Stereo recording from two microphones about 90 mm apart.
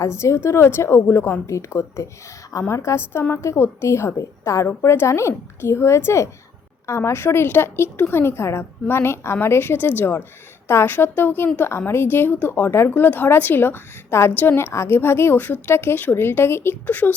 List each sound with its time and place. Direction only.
0.0 s a woman's voice: 30° left (ahead or behind)